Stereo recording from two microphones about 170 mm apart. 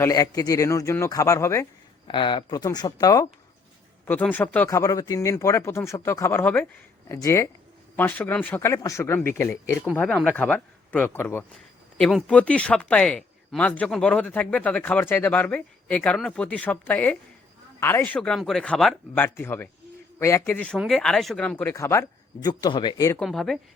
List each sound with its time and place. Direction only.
0.0 s speech: 20° left (ahead or behind)
2.0 s speech: 25° left (ahead or behind)
4.0 s speech: 10° left (ahead or behind)
23.2 s a woman's voice: 5° left (ahead or behind)